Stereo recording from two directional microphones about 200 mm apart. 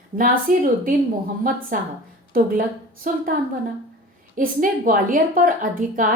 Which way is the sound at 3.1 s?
40° right (ahead or behind).